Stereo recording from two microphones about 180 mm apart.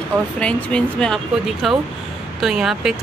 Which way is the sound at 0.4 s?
5° left (ahead or behind).